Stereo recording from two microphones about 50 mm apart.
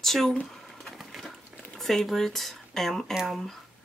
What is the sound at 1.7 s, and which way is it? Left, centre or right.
Speech, centre.